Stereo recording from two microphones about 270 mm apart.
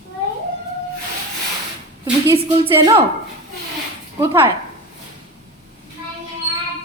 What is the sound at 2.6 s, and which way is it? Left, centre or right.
Speech, centre.